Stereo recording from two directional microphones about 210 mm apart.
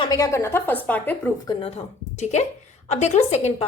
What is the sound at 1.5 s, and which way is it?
A woman's voice, 30° left (ahead or behind).